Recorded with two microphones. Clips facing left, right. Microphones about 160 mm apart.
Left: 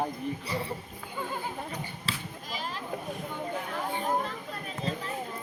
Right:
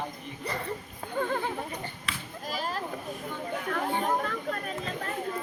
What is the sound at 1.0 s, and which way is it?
Goat, 60° right (ahead or behind).